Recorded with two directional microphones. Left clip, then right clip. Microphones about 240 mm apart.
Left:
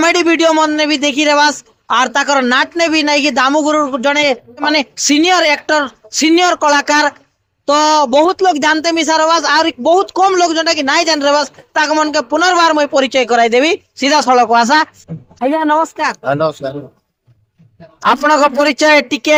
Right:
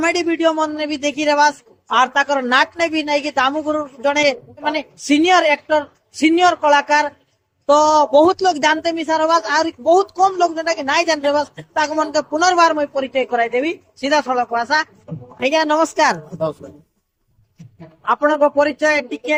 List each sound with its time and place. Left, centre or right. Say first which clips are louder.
0.0 s speech: left 6 dB; left
18.1 s speech: left 4 dB; left